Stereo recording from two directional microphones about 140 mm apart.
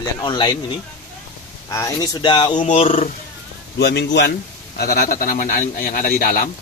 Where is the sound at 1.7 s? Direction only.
25° left (ahead or behind).